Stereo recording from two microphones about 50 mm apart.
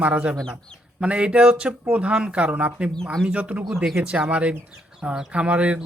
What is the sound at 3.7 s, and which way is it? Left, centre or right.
Speech, centre.